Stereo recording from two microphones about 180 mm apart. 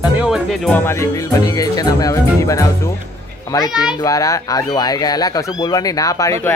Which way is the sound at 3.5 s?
15° left (ahead or behind).